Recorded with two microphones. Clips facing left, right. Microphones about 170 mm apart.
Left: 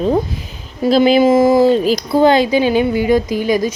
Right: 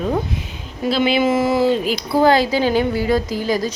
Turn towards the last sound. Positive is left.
turn(degrees=15)  # may be behind; listen again after turning